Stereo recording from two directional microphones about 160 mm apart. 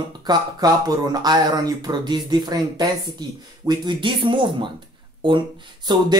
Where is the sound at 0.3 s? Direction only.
25° right (ahead or behind).